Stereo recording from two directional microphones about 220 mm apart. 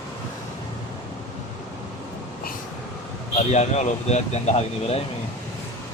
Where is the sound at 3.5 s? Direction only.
30° left (ahead or behind).